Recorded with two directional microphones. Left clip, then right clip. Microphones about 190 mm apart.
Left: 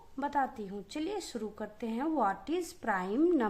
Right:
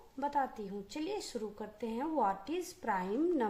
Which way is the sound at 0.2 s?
25° left (ahead or behind).